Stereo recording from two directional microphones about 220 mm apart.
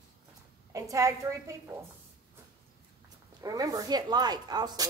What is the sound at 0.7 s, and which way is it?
Speech, 15° right (ahead or behind).